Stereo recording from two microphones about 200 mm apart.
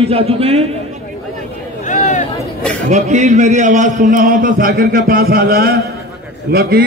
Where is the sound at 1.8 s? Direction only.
40° left (ahead or behind).